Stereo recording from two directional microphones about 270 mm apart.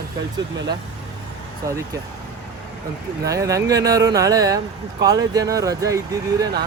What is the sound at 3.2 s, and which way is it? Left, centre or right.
Speech, centre.